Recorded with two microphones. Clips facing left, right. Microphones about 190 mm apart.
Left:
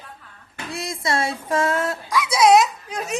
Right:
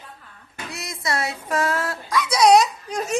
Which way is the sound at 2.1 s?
5° left (ahead or behind).